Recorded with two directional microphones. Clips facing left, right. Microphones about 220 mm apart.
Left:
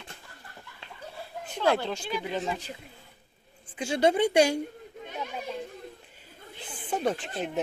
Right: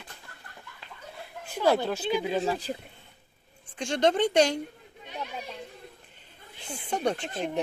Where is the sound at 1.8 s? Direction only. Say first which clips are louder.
Right 4 dB; 10° right (ahead or behind).